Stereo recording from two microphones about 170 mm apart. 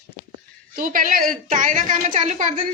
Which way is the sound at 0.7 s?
55° right (ahead or behind).